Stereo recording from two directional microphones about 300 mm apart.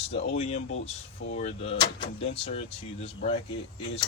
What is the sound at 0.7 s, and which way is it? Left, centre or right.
Speech, left.